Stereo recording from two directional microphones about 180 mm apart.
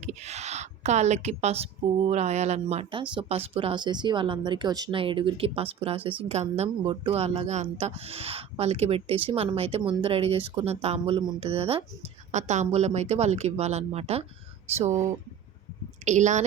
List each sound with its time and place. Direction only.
0.0 s a sound: 40° right (ahead or behind)
2.0 s speech: 40° right (ahead or behind)
16.0 s speech: 40° right (ahead or behind)